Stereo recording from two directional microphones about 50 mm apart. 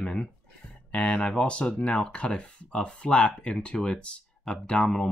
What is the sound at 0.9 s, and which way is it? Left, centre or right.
Speech, left.